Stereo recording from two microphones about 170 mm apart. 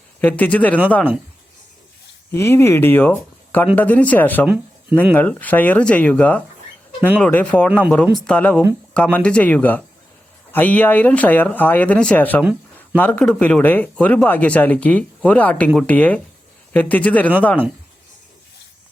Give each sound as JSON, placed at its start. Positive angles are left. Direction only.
{"t": 0.2, "sound": "speech", "side_deg": 10}
{"t": 2.3, "sound": "speech", "side_deg": 15}
{"t": 4.4, "sound": "speech", "side_deg": -10}
{"t": 5.1, "sound": "speech", "side_deg": 10}